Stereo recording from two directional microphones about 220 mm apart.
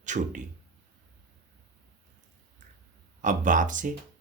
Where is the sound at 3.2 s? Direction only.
35° right (ahead or behind).